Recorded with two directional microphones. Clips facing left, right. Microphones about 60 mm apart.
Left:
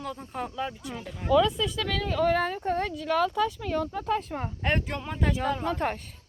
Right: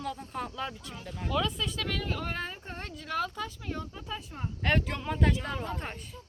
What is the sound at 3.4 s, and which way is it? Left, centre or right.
Speech, left.